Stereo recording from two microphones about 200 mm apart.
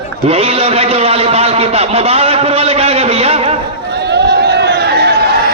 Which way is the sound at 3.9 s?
55° right (ahead or behind).